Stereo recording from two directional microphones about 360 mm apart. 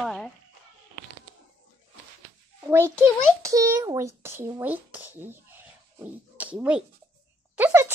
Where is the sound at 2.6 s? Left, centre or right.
Centre.